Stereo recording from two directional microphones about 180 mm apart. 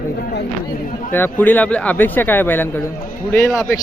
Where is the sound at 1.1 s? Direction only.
10° left (ahead or behind).